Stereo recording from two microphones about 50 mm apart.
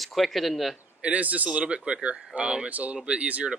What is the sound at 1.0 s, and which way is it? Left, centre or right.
Speech, right.